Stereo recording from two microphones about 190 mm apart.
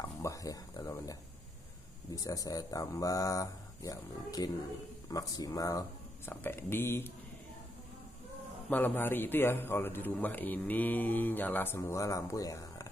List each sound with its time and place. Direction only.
0.0 s a sound: 15° left (ahead or behind)
2.0 s a man's voice: 20° left (ahead or behind)
8.6 s a man's voice: 10° left (ahead or behind)